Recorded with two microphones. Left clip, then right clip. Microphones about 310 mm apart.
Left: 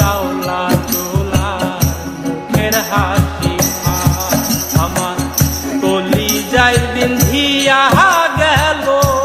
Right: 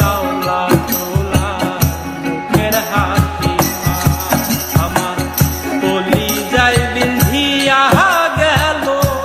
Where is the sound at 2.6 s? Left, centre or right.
Centre.